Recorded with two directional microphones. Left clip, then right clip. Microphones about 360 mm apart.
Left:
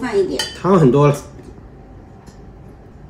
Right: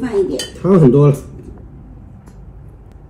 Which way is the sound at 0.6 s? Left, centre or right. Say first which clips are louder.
Right 2 dB; right.